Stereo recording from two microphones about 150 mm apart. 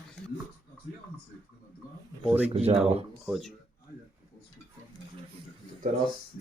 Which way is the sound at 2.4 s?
45° right (ahead or behind).